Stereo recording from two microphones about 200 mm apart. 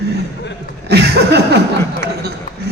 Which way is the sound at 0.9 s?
55° right (ahead or behind).